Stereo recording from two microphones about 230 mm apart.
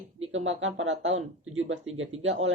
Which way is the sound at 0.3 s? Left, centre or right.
Right.